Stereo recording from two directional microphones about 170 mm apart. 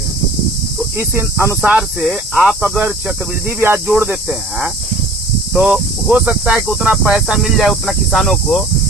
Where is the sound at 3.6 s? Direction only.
15° right (ahead or behind).